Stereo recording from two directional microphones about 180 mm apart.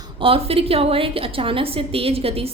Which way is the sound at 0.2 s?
30° right (ahead or behind).